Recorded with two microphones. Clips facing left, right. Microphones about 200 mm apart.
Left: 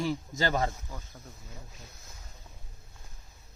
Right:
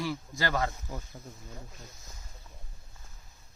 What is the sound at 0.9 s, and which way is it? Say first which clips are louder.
Speech: right 4 dB; 15° right (ahead or behind).